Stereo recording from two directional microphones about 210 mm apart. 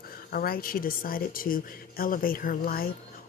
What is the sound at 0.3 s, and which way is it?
Speech, 45° left (ahead or behind).